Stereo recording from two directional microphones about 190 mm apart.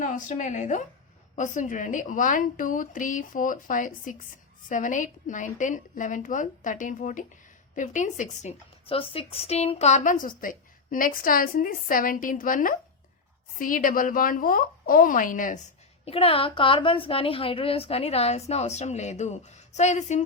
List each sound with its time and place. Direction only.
0.0 s a woman's voice: 40° left (ahead or behind)
16.0 s a woman's voice: 30° left (ahead or behind)